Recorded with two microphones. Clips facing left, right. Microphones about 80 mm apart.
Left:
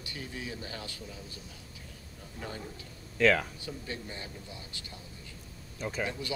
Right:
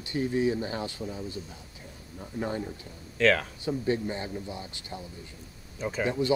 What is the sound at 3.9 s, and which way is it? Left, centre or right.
Speech, right.